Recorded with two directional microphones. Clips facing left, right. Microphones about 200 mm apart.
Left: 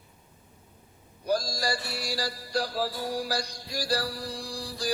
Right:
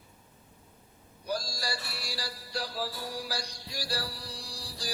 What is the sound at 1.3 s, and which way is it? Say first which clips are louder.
Mantra: left 7 dB; 45° left (ahead or behind).